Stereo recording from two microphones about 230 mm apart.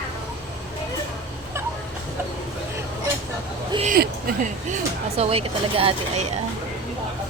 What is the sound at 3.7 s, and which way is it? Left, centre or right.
Speech, right.